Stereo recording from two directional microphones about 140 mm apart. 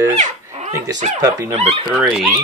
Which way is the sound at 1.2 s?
25° right (ahead or behind).